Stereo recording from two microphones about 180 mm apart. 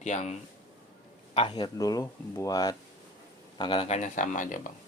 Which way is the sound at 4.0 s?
45° left (ahead or behind).